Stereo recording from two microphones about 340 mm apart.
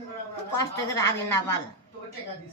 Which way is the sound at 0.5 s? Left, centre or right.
Centre.